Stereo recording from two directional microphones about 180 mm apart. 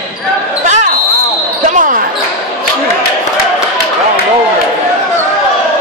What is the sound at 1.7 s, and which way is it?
Basketball bounce, 45° right (ahead or behind).